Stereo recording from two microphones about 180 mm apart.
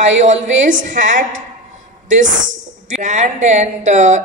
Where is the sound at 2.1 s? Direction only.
45° right (ahead or behind).